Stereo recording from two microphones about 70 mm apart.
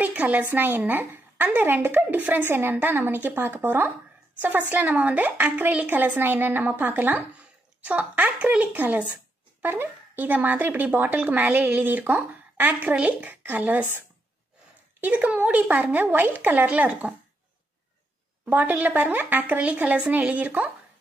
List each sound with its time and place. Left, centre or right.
0.0 s a woman's voice: right
15.0 s a woman's voice: right
18.4 s a woman's voice: right